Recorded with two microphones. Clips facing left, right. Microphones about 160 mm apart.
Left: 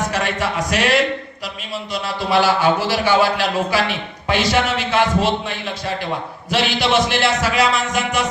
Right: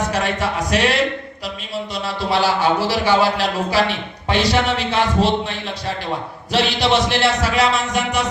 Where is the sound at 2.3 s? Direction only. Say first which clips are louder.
Left 2 dB; 30° right (ahead or behind).